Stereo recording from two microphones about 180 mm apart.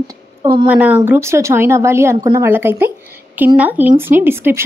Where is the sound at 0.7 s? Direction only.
10° right (ahead or behind).